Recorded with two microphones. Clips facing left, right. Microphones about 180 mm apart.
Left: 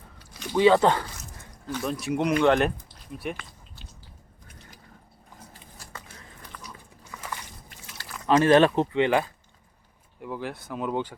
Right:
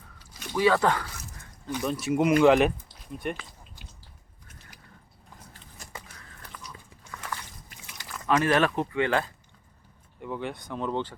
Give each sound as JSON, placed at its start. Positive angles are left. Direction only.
{"t": 0.5, "sound": "speech", "side_deg": 25}
{"t": 1.8, "sound": "speech", "side_deg": 0}
{"t": 7.1, "sound": "walk", "side_deg": 5}
{"t": 8.3, "sound": "speech", "side_deg": 30}
{"t": 10.2, "sound": "speech", "side_deg": 0}